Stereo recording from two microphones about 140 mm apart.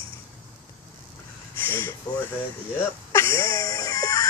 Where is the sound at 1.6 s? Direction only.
15° left (ahead or behind).